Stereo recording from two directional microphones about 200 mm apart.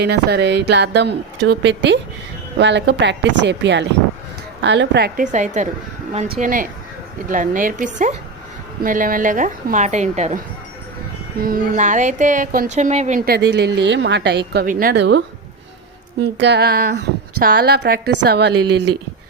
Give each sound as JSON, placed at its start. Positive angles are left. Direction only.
{"t": 0.0, "sound": "a woman's voice", "side_deg": -55}
{"t": 5.2, "sound": "a woman's voice", "side_deg": -40}
{"t": 16.2, "sound": "a woman's voice", "side_deg": -55}